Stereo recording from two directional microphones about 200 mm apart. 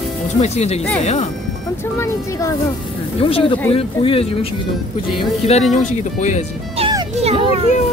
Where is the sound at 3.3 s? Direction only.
30° left (ahead or behind).